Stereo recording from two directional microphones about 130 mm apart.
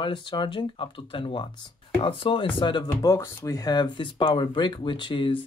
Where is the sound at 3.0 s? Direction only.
25° left (ahead or behind).